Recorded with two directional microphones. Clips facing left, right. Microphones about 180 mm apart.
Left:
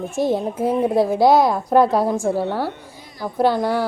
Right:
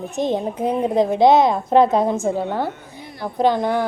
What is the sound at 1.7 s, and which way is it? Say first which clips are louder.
Speech: right 1 dB; 20° right (ahead or behind).